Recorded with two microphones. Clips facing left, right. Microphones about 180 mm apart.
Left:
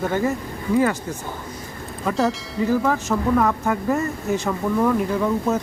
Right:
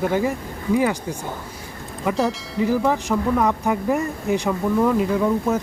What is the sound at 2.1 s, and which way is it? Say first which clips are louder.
Speech: even; 15° right (ahead or behind).